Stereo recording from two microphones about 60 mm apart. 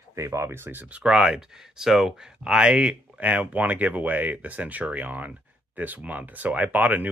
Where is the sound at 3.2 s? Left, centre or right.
Right.